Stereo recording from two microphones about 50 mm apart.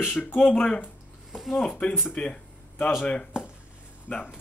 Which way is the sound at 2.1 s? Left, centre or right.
Left.